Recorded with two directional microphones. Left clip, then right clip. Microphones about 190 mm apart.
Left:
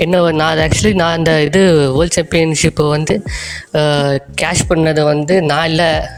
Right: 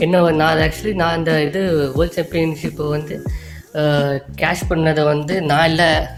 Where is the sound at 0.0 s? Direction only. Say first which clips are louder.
Left 2 dB; 45° left (ahead or behind).